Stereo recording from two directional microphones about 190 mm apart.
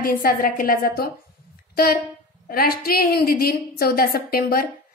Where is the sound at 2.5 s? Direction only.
55° left (ahead or behind).